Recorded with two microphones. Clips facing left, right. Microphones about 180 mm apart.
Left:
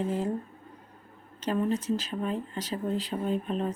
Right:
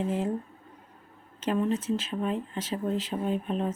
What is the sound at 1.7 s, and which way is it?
Speech, 35° left (ahead or behind).